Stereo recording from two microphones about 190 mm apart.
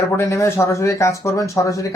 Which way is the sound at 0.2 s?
15° left (ahead or behind).